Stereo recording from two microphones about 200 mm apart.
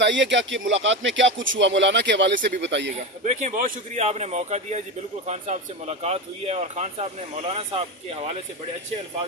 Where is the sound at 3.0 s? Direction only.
35° right (ahead or behind).